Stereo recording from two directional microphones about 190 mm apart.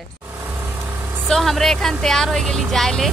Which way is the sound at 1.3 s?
Centre (ahead or behind).